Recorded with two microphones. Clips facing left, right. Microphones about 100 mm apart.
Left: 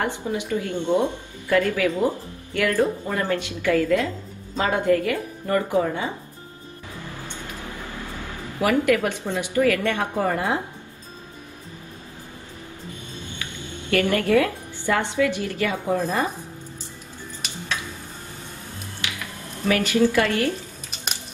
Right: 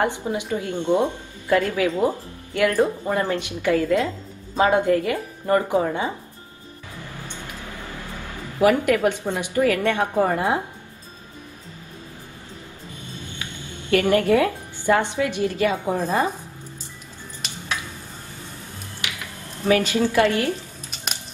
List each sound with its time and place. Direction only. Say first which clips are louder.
0.0 s speech: right 2 dB; 20° right (ahead or behind)
8.5 s speech: right 2 dB; 25° right (ahead or behind)
13.8 s speech: right 3 dB; 20° right (ahead or behind)
19.7 s speech: even; 20° right (ahead or behind)